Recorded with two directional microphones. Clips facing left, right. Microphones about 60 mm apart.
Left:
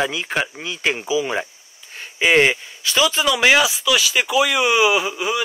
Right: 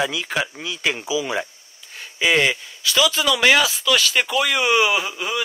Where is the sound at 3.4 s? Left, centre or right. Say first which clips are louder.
Left 1 dB; centre.